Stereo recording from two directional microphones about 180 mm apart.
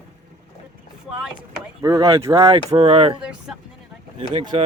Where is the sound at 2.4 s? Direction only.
30° right (ahead or behind).